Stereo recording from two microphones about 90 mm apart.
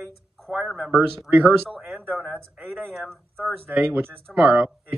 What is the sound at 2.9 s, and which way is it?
Speech, centre (ahead or behind).